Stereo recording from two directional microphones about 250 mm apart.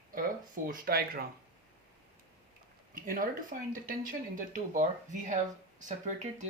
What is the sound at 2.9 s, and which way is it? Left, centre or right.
Speech, right.